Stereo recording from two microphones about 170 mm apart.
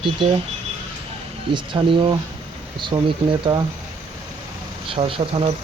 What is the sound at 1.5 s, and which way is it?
Speech, 30° right (ahead or behind).